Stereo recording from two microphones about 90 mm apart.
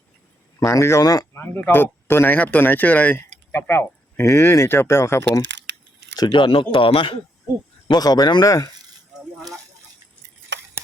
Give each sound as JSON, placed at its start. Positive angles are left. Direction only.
{"t": 0.6, "sound": "speech", "side_deg": 35}
{"t": 1.3, "sound": "speech", "side_deg": 25}
{"t": 6.1, "sound": "speech", "side_deg": 55}
{"t": 7.9, "sound": "speech", "side_deg": 45}